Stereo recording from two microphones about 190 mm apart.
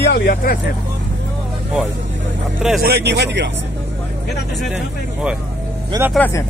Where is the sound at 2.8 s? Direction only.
60° right (ahead or behind).